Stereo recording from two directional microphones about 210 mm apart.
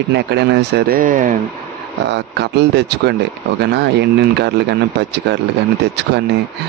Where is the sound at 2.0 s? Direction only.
55° right (ahead or behind).